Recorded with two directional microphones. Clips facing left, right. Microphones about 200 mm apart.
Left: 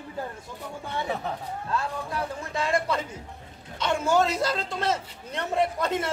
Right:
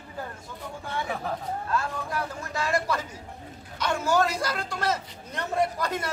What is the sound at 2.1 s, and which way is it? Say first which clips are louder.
A man's voice: left 1 dB; 25° left (ahead or behind).